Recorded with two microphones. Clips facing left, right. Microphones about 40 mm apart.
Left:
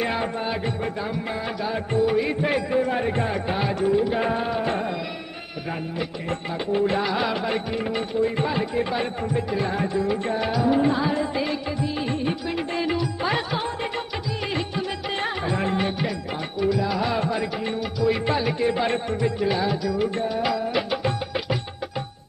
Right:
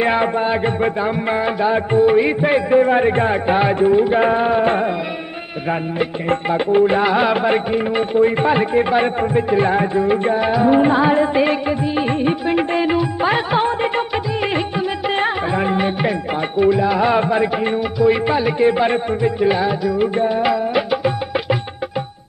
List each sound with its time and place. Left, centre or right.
0.0 s music: right
5.9 s music: right
18.2 s music: centre